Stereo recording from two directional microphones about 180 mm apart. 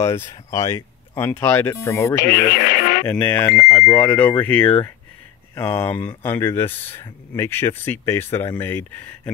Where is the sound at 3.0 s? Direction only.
10° left (ahead or behind).